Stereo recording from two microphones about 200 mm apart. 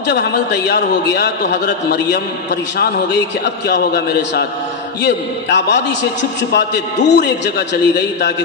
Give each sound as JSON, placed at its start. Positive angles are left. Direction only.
{"t": 0.0, "sound": "a man's voice", "side_deg": 55}